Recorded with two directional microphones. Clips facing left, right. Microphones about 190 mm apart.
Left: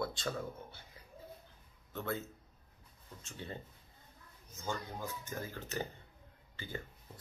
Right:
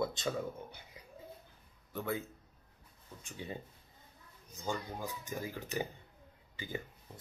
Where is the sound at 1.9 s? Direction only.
15° right (ahead or behind).